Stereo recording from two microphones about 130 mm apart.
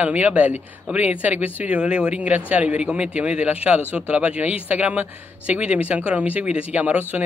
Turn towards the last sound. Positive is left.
turn(degrees=-10)  # may be behind; listen again after turning